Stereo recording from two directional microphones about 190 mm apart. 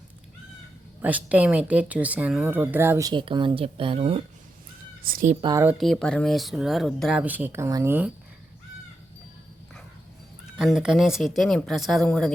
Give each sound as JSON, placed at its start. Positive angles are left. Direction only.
{"t": 1.0, "sound": "speech", "side_deg": -10}
{"t": 3.1, "sound": "speech", "side_deg": -25}
{"t": 5.0, "sound": "speech", "side_deg": -45}
{"t": 5.4, "sound": "speech", "side_deg": -20}
{"t": 5.6, "sound": "speech", "side_deg": 0}
{"t": 10.6, "sound": "speech", "side_deg": 0}